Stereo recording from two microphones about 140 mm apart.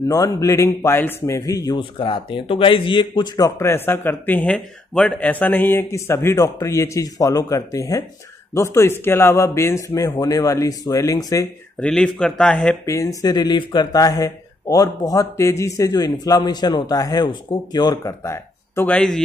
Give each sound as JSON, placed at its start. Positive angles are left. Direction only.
{"t": 0.1, "sound": "speech", "side_deg": 25}
{"t": 1.8, "sound": "speech", "side_deg": 35}
{"t": 11.8, "sound": "a man's voice", "side_deg": 5}
{"t": 12.8, "sound": "speech", "side_deg": 25}
{"t": 18.9, "sound": "a man's voice", "side_deg": 5}